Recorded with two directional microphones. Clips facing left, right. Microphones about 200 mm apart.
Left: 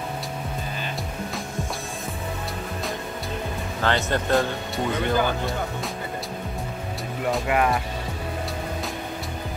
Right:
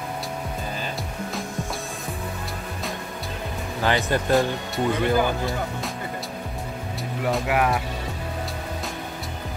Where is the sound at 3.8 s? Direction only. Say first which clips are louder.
Right 1 dB; 10° right (ahead or behind).